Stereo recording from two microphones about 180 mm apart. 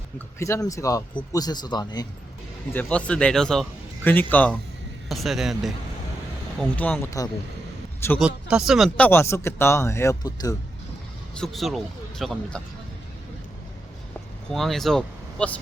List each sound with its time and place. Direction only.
0.3 s speech: 15° left (ahead or behind)
2.7 s a man's voice: 5° left (ahead or behind)
8.2 s speech: 5° right (ahead or behind)
9.0 s a man's voice: 15° left (ahead or behind)
11.3 s speech: centre (ahead or behind)
14.5 s speech: centre (ahead or behind)